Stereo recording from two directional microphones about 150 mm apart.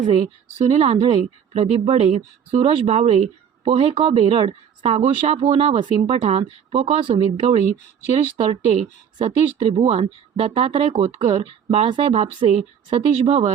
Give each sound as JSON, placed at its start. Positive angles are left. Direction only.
{"t": 0.7, "sound": "speech", "side_deg": -40}